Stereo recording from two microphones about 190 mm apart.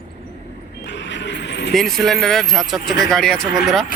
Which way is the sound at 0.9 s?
70° left (ahead or behind).